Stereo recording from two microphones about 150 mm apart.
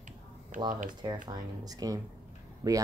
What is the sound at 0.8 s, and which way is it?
Speech, 30° right (ahead or behind).